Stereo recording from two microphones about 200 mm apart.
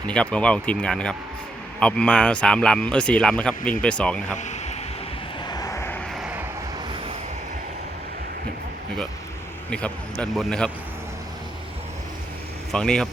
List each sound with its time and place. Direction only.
0.1 s speech: 5° left (ahead or behind)
4.4 s a sound: 35° left (ahead or behind)
5.5 s vehicle: 15° left (ahead or behind)
6.1 s vehicle: 5° right (ahead or behind)
9.6 s speech: 5° left (ahead or behind)
12.7 s speech: 5° left (ahead or behind)